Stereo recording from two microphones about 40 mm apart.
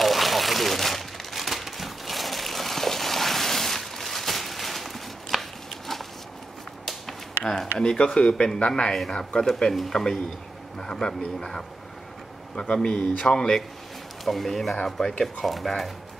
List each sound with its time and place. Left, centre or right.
0.0 s crumpling: centre
6.9 s a sound: centre
7.8 s speech: left
9.4 s speech: centre
12.6 s speech: left
14.2 s speech: centre
15.4 s speech: centre